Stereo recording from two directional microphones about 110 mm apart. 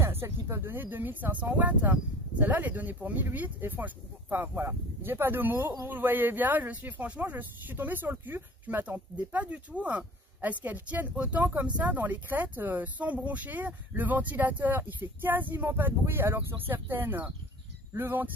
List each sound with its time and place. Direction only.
0.0 s speech: 25° right (ahead or behind)